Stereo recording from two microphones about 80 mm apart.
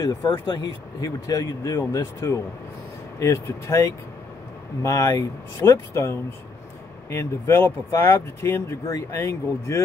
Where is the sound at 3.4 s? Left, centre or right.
Left.